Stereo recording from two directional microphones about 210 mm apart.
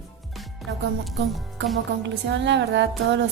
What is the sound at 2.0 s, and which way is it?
Music, 55° right (ahead or behind).